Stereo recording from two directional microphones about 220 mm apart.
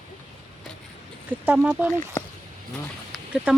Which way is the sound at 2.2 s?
10° left (ahead or behind).